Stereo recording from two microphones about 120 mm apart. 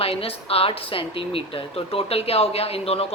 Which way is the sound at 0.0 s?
55° left (ahead or behind).